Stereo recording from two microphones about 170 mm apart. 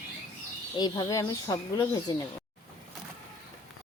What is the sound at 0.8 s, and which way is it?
Speech, 25° left (ahead or behind).